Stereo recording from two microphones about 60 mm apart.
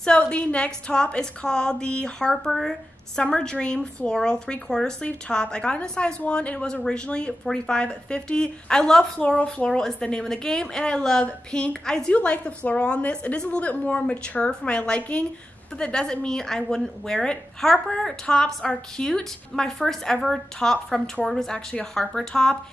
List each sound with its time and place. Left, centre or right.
0.0 s a woman's voice: centre
9.2 s a woman's voice: centre
9.7 s a woman's voice: centre